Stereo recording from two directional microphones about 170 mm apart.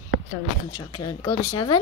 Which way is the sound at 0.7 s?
25° left (ahead or behind).